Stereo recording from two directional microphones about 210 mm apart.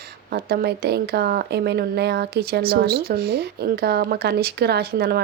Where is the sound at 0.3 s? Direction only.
45° right (ahead or behind).